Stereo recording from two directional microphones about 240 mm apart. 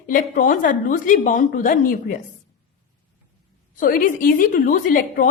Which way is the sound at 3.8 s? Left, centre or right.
Left.